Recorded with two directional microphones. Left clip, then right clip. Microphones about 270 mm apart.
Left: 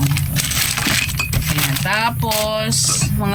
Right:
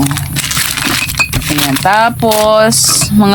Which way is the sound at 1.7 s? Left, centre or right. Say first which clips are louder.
Right 11 dB; centre.